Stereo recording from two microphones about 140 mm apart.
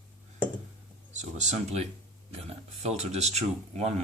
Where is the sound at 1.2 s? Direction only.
55° right (ahead or behind).